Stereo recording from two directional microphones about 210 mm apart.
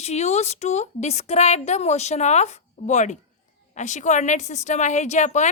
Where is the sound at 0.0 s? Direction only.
30° left (ahead or behind).